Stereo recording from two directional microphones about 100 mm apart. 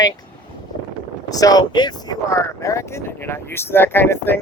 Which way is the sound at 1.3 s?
40° left (ahead or behind).